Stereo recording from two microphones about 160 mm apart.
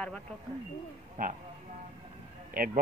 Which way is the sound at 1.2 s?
55° right (ahead or behind).